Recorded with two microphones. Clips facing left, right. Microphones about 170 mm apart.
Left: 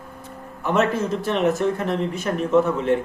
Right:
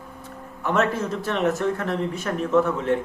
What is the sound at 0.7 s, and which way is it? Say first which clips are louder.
Speech: left 2 dB; 25° left (ahead or behind).